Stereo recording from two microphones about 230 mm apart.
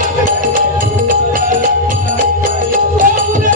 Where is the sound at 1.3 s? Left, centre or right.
Right.